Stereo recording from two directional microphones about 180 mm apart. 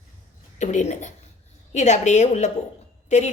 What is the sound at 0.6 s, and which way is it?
A woman's voice, 40° left (ahead or behind).